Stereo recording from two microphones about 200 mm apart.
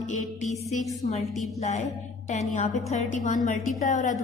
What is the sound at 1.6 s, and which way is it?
A woman's voice, 35° left (ahead or behind).